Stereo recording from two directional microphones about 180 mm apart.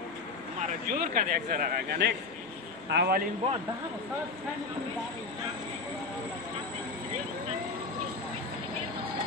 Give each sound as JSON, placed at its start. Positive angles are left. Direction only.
{"t": 0.6, "sound": "a man's voice", "side_deg": -50}